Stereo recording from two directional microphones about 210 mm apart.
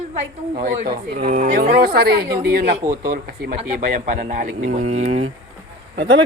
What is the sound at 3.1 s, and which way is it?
Speech, 45° right (ahead or behind).